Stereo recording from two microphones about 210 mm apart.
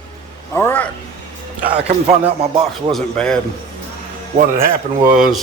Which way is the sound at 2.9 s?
5° left (ahead or behind).